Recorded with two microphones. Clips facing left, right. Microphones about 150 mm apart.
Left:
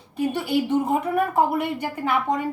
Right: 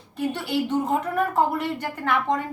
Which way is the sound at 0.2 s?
10° left (ahead or behind).